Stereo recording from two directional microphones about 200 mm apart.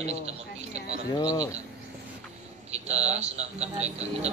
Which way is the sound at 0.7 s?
35° right (ahead or behind).